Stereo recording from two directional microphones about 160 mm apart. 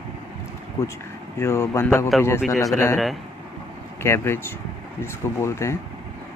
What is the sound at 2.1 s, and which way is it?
Speech, centre (ahead or behind).